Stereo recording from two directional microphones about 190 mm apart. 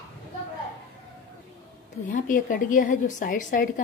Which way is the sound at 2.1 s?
45° left (ahead or behind).